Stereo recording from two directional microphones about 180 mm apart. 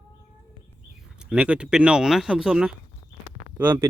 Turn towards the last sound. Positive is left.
turn(degrees=-10)  # may be behind; listen again after turning